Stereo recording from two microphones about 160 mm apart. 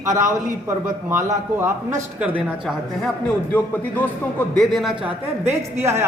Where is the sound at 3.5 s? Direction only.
10° left (ahead or behind).